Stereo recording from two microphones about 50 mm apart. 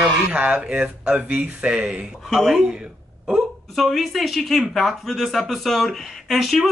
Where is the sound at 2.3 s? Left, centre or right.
Centre.